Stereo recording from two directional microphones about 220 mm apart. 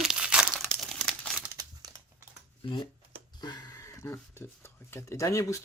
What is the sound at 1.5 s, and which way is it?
Crumpling, 15° right (ahead or behind).